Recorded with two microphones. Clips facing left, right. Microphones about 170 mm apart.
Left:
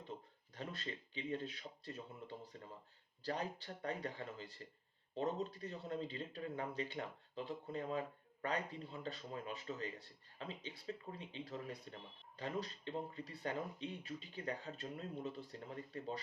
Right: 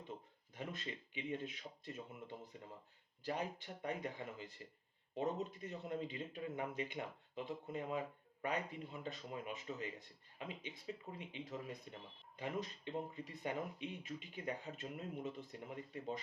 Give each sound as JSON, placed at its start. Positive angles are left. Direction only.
{"t": 0.5, "sound": "speech", "side_deg": -15}